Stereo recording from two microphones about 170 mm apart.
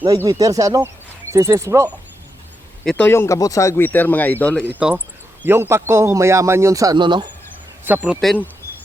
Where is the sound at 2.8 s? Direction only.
10° left (ahead or behind).